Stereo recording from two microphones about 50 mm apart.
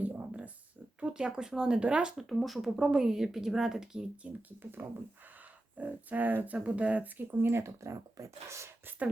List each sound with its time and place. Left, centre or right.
0.3 s a sound: right
0.9 s speech: right
2.1 s speech: centre
4.2 s speech: right
4.8 s speech: right
7.2 s speech: right